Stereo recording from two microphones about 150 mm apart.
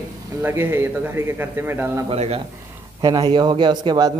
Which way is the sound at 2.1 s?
40° right (ahead or behind).